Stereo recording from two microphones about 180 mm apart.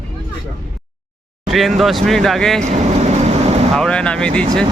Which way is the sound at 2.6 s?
35° right (ahead or behind).